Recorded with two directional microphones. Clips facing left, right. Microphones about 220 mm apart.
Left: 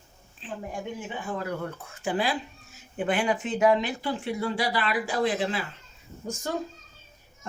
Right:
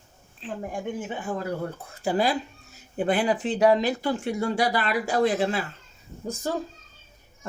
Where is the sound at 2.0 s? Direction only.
40° right (ahead or behind).